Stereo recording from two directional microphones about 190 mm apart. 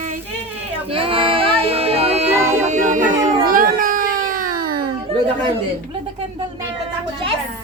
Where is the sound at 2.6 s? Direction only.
40° right (ahead or behind).